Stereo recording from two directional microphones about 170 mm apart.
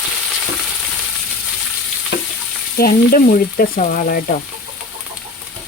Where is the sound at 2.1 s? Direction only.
90° left.